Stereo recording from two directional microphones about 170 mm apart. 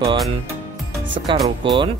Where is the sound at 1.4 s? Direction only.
30° right (ahead or behind).